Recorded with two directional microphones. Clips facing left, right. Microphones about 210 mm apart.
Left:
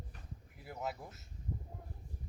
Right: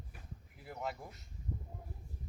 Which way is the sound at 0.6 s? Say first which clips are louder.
Even; centre (ahead or behind).